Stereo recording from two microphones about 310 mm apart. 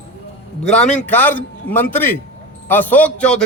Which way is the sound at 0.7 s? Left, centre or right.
Centre.